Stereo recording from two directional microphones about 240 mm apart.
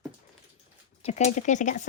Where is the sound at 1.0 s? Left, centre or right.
Left.